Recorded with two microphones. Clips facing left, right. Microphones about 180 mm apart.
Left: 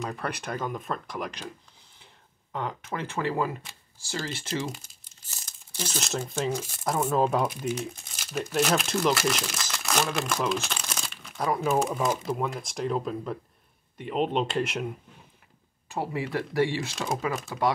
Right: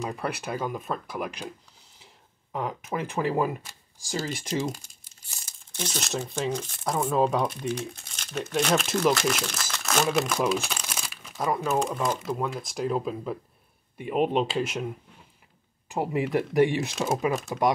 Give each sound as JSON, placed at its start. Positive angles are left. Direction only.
{"t": 0.0, "sound": "speech", "side_deg": -10}
{"t": 2.5, "sound": "speech", "side_deg": -10}
{"t": 5.8, "sound": "speech", "side_deg": 0}
{"t": 11.0, "sound": "crumpling", "side_deg": -5}
{"t": 11.8, "sound": "speech", "side_deg": 5}
{"t": 15.9, "sound": "speech", "side_deg": -15}